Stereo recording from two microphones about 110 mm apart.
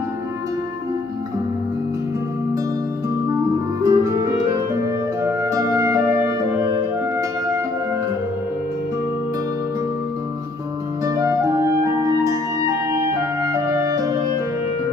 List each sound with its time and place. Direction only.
3.8 s music: 30° right (ahead or behind)
11.1 s music: 30° right (ahead or behind)